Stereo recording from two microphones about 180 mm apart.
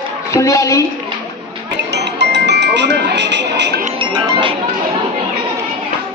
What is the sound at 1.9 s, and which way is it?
Music, 75° right (ahead or behind).